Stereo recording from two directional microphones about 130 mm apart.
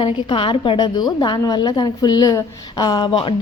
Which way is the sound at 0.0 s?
40° left (ahead or behind).